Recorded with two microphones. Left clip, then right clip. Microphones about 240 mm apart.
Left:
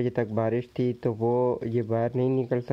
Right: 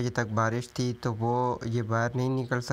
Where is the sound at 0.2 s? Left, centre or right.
Right.